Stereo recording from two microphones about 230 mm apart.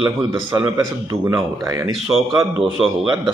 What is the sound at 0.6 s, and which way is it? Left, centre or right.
Speech, centre.